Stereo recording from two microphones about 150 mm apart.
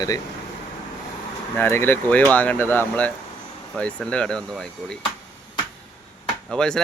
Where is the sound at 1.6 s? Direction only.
15° left (ahead or behind).